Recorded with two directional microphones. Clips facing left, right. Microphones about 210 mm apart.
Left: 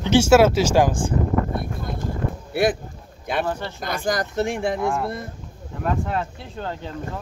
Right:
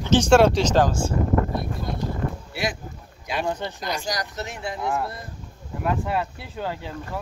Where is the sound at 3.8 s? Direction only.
55° left (ahead or behind).